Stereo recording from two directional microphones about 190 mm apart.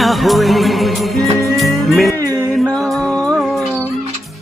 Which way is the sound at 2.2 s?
15° right (ahead or behind).